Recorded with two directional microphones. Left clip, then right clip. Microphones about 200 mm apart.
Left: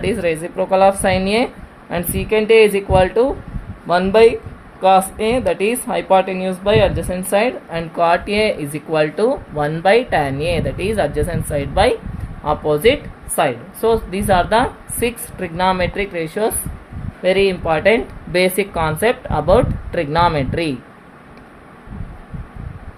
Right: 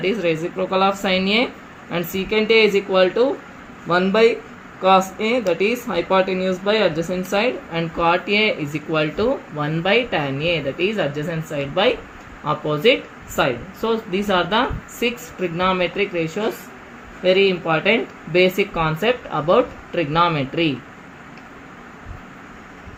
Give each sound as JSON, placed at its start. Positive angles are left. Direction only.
{"t": 0.0, "sound": "speech", "side_deg": 60}